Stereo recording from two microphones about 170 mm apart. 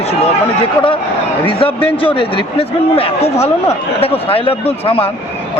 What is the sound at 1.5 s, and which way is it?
A man's voice, 30° left (ahead or behind).